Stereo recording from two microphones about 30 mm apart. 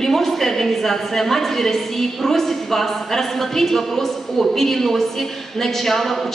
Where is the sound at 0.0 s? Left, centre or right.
Centre.